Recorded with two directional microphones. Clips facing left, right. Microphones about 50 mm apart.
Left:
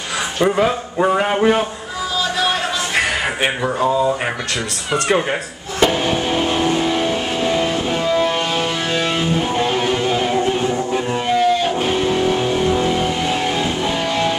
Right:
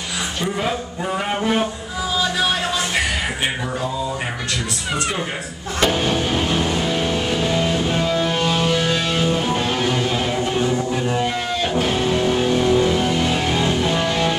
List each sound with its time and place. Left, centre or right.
1.0 s speech: left
5.8 s music: centre
13.1 s music: centre